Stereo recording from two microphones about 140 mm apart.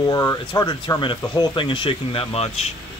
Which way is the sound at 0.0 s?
25° left (ahead or behind).